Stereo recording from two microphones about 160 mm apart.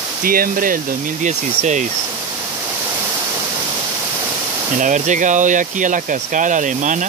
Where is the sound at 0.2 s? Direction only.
65° right (ahead or behind).